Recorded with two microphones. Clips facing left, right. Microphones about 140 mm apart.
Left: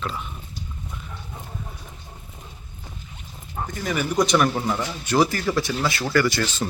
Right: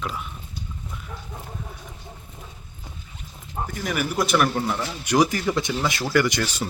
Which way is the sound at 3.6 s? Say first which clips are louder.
Left 1 dB; 5° right (ahead or behind).